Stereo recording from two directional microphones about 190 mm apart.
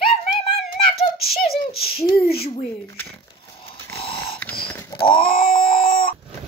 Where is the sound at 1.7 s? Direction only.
55° left (ahead or behind).